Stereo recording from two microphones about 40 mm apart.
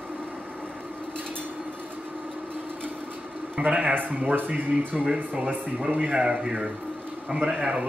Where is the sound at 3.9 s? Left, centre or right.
Right.